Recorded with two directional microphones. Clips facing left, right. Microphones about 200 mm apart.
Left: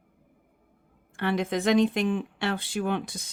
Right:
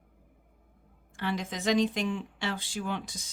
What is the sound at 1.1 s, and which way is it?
Speech, 60° left (ahead or behind).